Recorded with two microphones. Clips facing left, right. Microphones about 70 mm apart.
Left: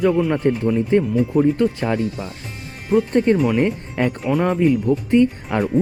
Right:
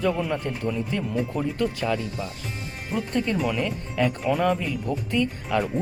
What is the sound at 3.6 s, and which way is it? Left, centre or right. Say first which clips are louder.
Speech: left 5 dB; left.